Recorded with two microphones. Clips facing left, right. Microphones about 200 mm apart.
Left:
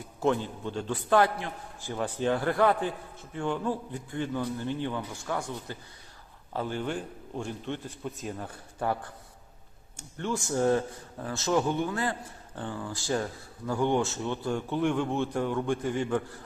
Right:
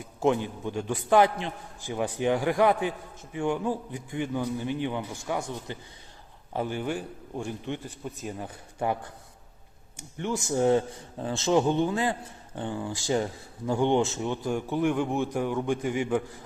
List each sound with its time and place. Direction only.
0.2 s speech: 15° right (ahead or behind)
10.0 s a man's voice: 15° right (ahead or behind)